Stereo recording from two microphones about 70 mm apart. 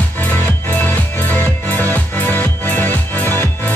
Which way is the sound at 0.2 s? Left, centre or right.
Left.